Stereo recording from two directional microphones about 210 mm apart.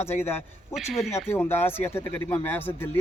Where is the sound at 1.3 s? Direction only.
10° left (ahead or behind).